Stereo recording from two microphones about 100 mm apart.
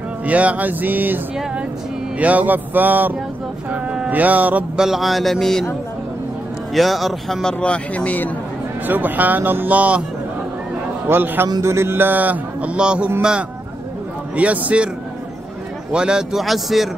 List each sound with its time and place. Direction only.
0.2 s speech: 15° right (ahead or behind)
3.7 s a sound: 10° right (ahead or behind); by 5.7 s 5° left (ahead or behind)
6.7 s speech: centre (ahead or behind)
8.8 s speech: 20° right (ahead or behind)
11.1 s speech: 20° right (ahead or behind)
11.4 s speech: 30° right (ahead or behind); by 14.9 s 15° right (ahead or behind)
15.9 s speech: 10° right (ahead or behind)